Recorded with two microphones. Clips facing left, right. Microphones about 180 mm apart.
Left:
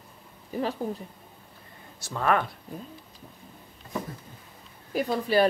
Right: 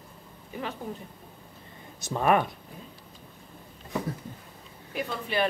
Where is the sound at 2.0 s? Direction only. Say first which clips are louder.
Right 2 dB; 20° right (ahead or behind).